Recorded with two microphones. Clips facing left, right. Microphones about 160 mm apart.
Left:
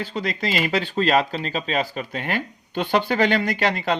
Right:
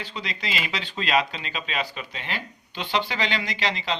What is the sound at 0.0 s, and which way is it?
Speech, 45° left (ahead or behind).